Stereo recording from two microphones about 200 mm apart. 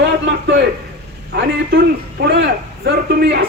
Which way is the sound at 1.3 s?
55° right (ahead or behind).